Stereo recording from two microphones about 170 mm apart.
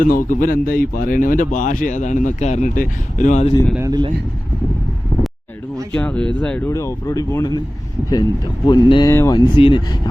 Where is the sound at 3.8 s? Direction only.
20° right (ahead or behind).